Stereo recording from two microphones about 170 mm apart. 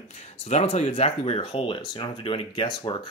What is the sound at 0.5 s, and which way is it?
Speech, 40° left (ahead or behind).